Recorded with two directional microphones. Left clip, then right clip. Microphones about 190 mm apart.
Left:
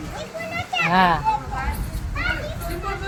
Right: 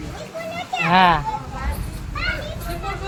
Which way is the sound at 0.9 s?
15° right (ahead or behind).